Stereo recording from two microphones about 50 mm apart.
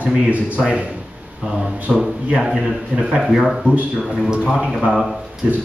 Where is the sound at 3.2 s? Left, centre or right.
Centre.